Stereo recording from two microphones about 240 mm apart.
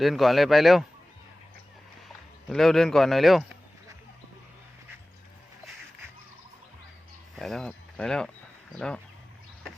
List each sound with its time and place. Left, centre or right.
0.0 s speech: centre
2.0 s speech: centre
7.3 s speech: centre